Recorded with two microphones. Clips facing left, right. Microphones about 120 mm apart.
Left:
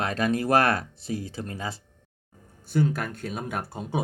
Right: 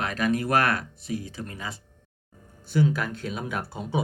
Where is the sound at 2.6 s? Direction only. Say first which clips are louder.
Right 1 dB; 50° left (ahead or behind).